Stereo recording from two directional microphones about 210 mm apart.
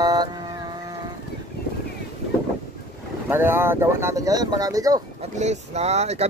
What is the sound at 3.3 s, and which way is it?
Speech, 10° right (ahead or behind).